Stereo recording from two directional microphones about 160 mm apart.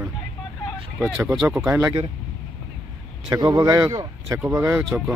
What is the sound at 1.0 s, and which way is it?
Speech, 15° right (ahead or behind).